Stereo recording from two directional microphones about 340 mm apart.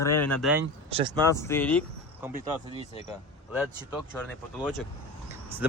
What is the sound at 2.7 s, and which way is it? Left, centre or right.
Speech, centre.